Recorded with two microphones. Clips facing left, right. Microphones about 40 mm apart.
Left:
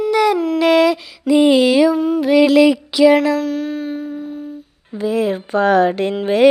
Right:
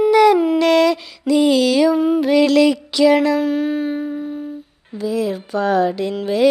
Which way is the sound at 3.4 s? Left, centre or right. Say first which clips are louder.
Right 2 dB; centre.